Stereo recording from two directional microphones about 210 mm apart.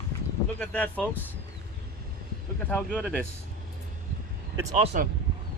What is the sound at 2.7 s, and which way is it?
Speech, centre (ahead or behind).